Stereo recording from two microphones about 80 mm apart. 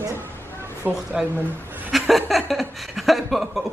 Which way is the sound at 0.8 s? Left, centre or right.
Right.